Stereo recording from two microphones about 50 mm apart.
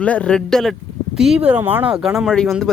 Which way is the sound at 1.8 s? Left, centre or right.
Centre.